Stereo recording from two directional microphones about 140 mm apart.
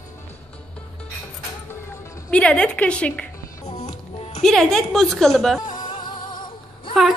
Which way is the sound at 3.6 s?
50° left (ahead or behind).